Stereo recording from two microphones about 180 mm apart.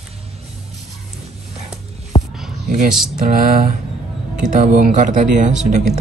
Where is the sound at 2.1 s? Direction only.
30° left (ahead or behind).